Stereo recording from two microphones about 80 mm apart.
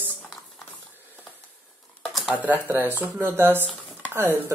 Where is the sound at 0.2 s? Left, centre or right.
Centre.